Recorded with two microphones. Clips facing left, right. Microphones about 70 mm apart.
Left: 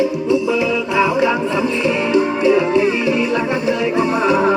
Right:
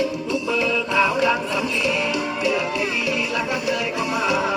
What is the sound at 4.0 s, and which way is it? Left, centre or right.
Music, left.